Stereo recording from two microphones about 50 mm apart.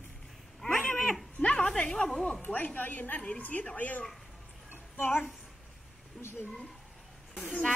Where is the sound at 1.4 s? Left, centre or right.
Left.